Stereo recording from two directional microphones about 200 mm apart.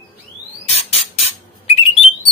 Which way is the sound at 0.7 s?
30° left (ahead or behind).